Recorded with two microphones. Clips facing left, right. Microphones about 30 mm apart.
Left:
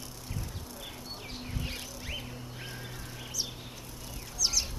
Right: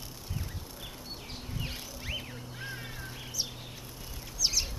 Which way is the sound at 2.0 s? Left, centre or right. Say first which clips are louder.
Right 1 dB; centre.